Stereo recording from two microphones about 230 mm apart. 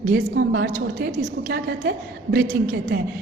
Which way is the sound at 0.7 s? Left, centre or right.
Right.